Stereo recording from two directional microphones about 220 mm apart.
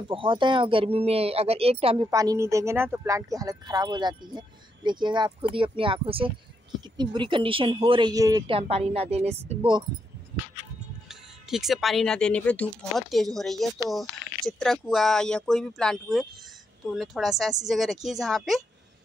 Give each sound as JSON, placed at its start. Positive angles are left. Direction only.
{"t": 0.1, "sound": "speech", "side_deg": -20}
{"t": 2.0, "sound": "speech", "side_deg": -15}
{"t": 11.1, "sound": "speech", "side_deg": 0}